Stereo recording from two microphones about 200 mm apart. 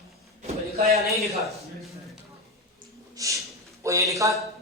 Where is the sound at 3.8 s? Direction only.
15° right (ahead or behind).